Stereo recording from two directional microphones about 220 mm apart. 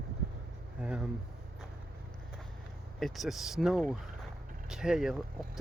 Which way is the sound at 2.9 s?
Centre (ahead or behind).